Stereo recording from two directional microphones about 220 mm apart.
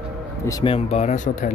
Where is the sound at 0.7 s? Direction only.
30° left (ahead or behind).